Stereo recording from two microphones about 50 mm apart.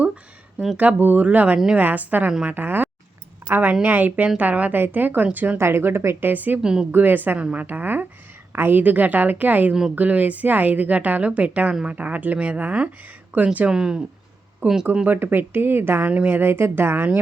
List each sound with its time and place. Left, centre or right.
0.8 s a woman's voice: right
1.5 s speech: centre
1.8 s a woman's voice: right
3.4 s a sound: right
3.8 s a woman's voice: right
5.5 s speech: right
6.1 s a woman's voice: right
6.6 s speech: centre
6.9 s a woman's voice: right
8.8 s a woman's voice: right
13.7 s speech: centre
14.6 s a woman's voice: right
16.0 s a woman's voice: right
16.4 s speech: right